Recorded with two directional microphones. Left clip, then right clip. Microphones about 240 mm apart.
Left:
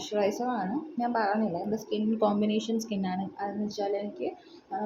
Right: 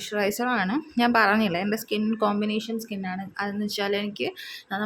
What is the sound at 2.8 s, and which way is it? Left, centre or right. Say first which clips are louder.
A woman's voice: even; right.